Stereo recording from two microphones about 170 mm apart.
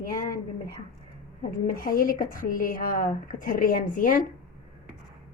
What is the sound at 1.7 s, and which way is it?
Speech, 55° left (ahead or behind).